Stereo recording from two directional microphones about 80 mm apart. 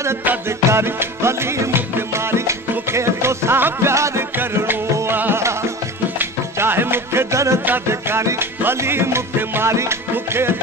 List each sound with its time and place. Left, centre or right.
0.7 s music: right
4.9 s music: right